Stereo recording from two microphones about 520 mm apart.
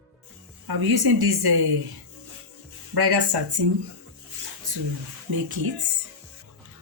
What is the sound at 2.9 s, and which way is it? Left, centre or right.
Speech, right.